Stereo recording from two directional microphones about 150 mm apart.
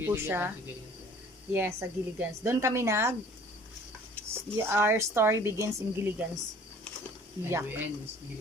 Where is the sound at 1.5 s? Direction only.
15° right (ahead or behind).